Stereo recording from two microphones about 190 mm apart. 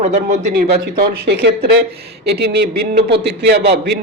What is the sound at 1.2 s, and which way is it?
A man's voice, 60° right (ahead or behind).